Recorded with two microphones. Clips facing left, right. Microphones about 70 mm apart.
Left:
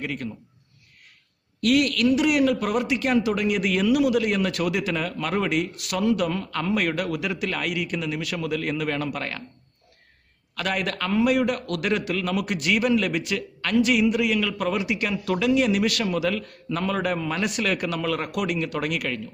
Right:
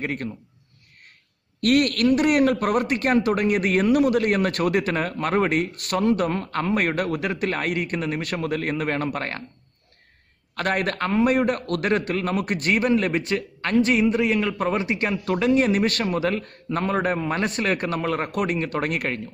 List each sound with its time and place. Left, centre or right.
0.0 s a man's voice: right
1.6 s a man's voice: right
10.5 s a man's voice: right